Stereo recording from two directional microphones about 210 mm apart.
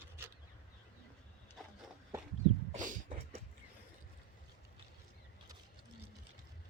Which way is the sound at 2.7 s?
40° right (ahead or behind).